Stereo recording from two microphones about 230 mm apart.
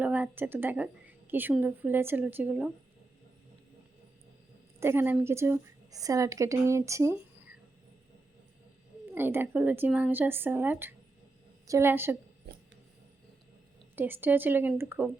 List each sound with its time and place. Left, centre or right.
0.0 s a woman's voice: centre
4.8 s a woman's voice: centre
9.1 s a woman's voice: centre
12.4 s a sound: right
13.9 s a woman's voice: centre